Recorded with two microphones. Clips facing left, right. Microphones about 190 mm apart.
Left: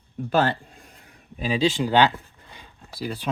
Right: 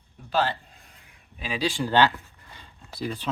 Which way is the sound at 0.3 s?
50° left (ahead or behind).